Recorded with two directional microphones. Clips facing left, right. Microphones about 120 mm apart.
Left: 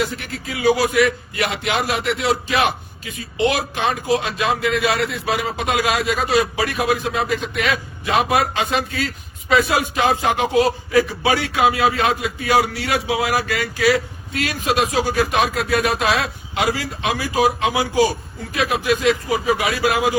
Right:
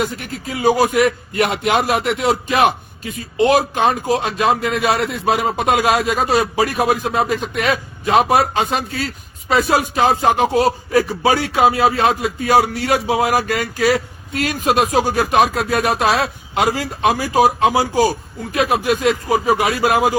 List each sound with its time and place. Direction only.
0.5 s a man's voice: 45° right (ahead or behind)